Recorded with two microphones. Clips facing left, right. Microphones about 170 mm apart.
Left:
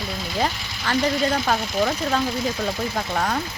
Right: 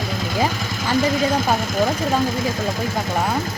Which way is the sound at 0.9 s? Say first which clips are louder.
Right 2 dB; 45° right (ahead or behind).